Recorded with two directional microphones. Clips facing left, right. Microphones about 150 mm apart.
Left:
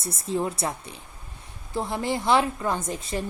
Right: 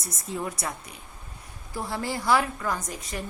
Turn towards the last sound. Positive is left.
turn(degrees=30)  # may be behind; listen again after turning